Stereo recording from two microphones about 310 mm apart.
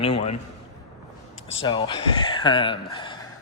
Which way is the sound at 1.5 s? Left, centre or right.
Centre.